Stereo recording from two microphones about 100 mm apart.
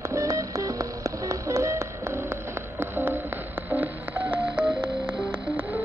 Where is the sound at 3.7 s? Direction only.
20° right (ahead or behind).